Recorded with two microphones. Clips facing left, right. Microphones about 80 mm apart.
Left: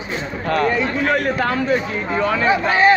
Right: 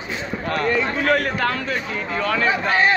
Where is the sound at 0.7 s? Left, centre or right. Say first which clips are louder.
Left 1 dB; centre.